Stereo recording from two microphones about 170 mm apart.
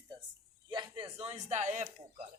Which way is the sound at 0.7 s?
30° right (ahead or behind).